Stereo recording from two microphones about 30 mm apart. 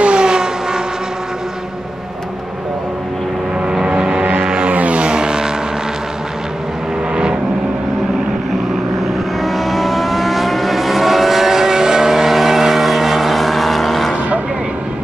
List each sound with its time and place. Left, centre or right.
0.0 s vehicle: right
3.8 s vehicle: right
4.4 s music: right
4.6 s music: right
5.0 s vehicle: right
9.4 s vehicle: centre; by 12.1 s right
12.1 s vehicle: centre